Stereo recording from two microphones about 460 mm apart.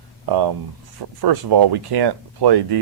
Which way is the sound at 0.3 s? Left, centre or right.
Right.